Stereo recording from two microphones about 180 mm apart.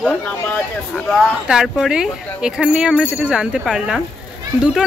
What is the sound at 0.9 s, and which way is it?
Speech, centre (ahead or behind).